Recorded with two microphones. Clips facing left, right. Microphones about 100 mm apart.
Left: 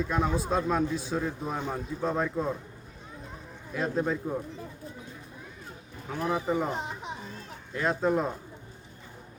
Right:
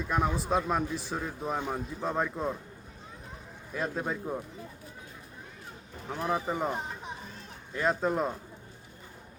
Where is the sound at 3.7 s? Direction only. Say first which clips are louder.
Left 4 dB; 5° right (ahead or behind).